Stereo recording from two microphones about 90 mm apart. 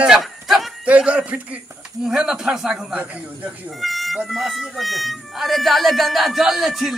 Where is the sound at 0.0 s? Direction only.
5° right (ahead or behind).